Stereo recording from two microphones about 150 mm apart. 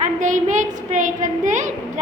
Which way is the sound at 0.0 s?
60° right (ahead or behind).